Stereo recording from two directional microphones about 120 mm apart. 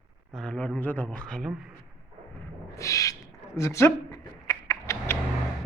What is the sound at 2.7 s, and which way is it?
Owl, 25° left (ahead or behind).